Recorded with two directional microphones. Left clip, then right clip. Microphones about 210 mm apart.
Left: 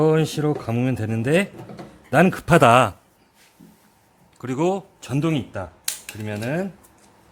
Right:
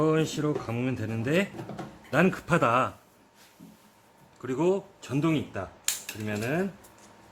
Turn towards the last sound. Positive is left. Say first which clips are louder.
# left 3 dB
turn(degrees=45)  # may be behind; listen again after turning